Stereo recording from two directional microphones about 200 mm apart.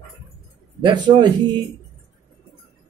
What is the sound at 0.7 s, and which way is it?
Speech, 20° right (ahead or behind).